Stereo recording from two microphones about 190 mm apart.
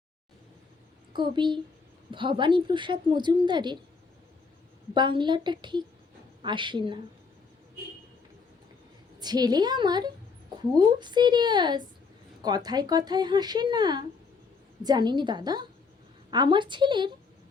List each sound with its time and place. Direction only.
1.1 s a woman's voice: 25° right (ahead or behind)
4.9 s a woman's voice: 25° right (ahead or behind)
9.1 s a woman's voice: 20° right (ahead or behind)